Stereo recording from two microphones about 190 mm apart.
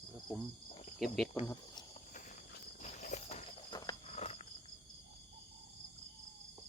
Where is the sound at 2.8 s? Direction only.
40° left (ahead or behind).